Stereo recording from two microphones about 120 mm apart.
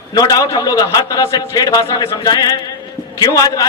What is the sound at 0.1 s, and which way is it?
A man's voice, 30° left (ahead or behind).